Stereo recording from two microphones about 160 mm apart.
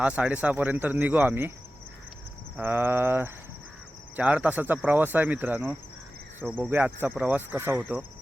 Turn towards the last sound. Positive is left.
turn(degrees=-15)  # may be behind; listen again after turning